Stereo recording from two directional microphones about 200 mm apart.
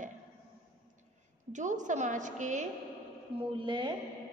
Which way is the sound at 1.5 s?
40° right (ahead or behind).